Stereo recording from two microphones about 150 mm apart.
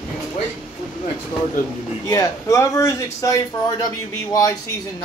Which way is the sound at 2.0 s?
20° left (ahead or behind).